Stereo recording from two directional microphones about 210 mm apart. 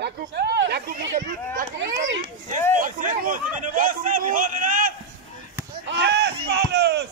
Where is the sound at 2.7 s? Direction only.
40° right (ahead or behind).